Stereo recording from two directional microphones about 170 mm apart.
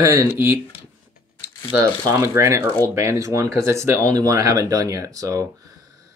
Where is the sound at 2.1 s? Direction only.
15° right (ahead or behind).